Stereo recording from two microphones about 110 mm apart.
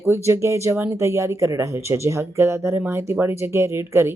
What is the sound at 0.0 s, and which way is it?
Speech, 25° right (ahead or behind).